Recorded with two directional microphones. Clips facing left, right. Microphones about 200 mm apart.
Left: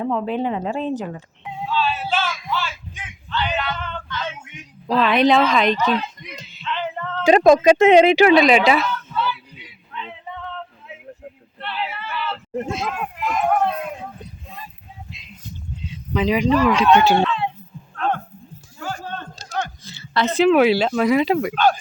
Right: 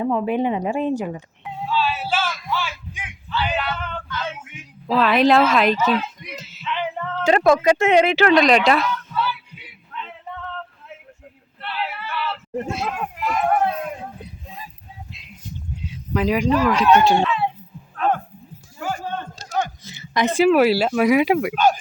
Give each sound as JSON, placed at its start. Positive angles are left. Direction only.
{"t": 0.0, "sound": "speech", "side_deg": -10}
{"t": 1.5, "sound": "music", "side_deg": -5}
{"t": 3.2, "sound": "speech", "side_deg": -5}
{"t": 7.3, "sound": "speech", "side_deg": 20}
{"t": 8.3, "sound": "speech", "side_deg": 5}
{"t": 9.9, "sound": "a sound", "side_deg": 0}
{"t": 16.1, "sound": "speech", "side_deg": -5}
{"t": 17.2, "sound": "a sound", "side_deg": -5}